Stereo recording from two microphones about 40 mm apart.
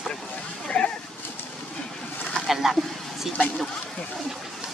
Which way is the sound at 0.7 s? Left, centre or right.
Left.